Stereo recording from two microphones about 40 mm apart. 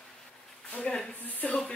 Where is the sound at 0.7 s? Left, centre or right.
Left.